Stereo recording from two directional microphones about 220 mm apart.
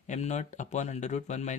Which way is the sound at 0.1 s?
30° left (ahead or behind).